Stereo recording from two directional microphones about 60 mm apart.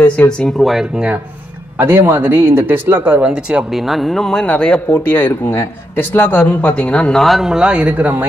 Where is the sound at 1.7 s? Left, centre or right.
Right.